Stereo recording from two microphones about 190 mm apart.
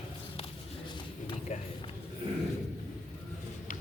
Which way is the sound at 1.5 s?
35° left (ahead or behind).